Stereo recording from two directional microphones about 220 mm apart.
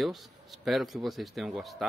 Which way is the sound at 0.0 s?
Centre (ahead or behind).